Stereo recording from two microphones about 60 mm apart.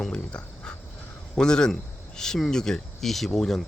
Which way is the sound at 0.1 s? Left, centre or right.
Centre.